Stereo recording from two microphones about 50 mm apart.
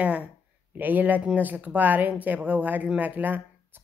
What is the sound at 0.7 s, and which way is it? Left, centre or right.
A woman's voice, right.